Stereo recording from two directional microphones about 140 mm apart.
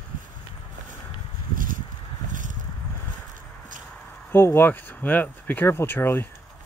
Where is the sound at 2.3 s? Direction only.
65° right (ahead or behind).